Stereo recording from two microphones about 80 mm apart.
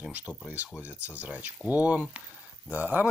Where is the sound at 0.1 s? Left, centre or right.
Centre.